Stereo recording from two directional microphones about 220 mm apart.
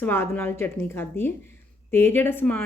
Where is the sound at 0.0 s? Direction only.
10° left (ahead or behind).